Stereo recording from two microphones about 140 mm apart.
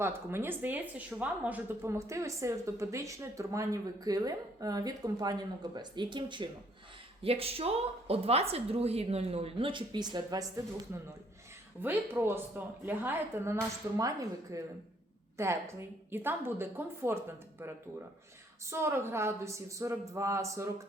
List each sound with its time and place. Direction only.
0.0 s a woman's voice: 15° right (ahead or behind)
10.9 s a woman's voice: 15° right (ahead or behind)